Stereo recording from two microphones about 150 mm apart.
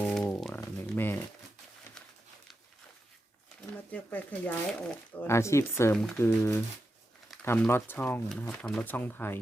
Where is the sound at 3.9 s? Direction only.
10° left (ahead or behind).